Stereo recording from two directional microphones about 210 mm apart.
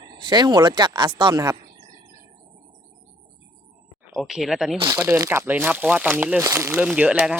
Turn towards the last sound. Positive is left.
turn(degrees=-5)  # may be behind; listen again after turning